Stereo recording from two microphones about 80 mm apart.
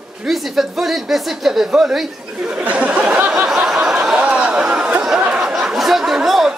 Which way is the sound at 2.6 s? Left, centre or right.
Centre.